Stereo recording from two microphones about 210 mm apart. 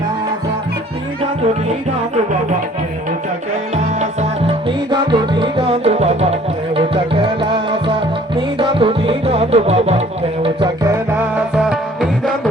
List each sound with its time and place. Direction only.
4.2 s music: 25° right (ahead or behind)
11.2 s music: 5° right (ahead or behind)